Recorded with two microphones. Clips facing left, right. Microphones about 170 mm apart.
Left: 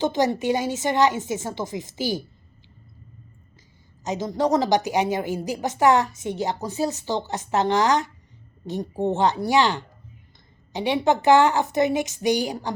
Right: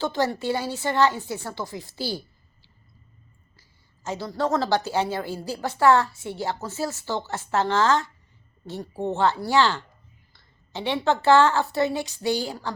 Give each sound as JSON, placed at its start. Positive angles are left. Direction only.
{"t": 0.0, "sound": "a woman's voice", "side_deg": 20}
{"t": 4.0, "sound": "a woman's voice", "side_deg": 20}